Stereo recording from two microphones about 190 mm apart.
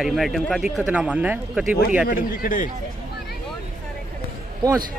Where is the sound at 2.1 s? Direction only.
45° left (ahead or behind).